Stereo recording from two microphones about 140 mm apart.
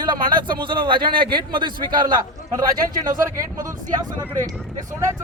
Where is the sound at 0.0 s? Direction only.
30° right (ahead or behind).